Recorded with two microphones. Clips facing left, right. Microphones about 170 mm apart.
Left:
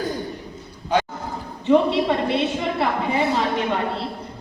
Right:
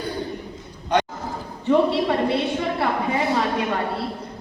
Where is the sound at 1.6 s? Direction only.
20° left (ahead or behind).